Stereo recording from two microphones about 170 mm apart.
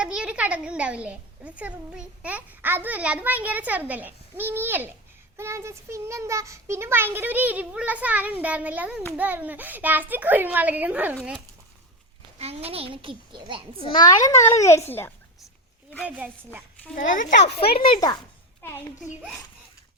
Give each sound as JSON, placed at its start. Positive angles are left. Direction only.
{"t": 0.0, "sound": "a woman's voice", "side_deg": -5}
{"t": 12.4, "sound": "a child's voice", "side_deg": -35}
{"t": 13.7, "sound": "a child's voice", "side_deg": 25}
{"t": 16.0, "sound": "a woman's voice", "side_deg": -10}
{"t": 16.9, "sound": "a child's voice", "side_deg": 50}
{"t": 17.8, "sound": "a child's voice", "side_deg": 25}
{"t": 18.6, "sound": "speech", "side_deg": 15}